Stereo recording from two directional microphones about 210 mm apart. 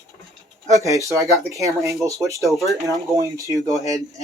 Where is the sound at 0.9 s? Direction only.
15° left (ahead or behind).